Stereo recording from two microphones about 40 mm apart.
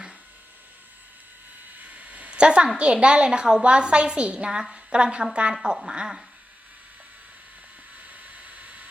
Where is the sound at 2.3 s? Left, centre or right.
Right.